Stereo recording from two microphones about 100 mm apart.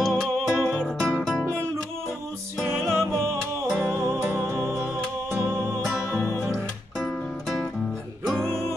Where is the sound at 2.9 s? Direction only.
25° right (ahead or behind).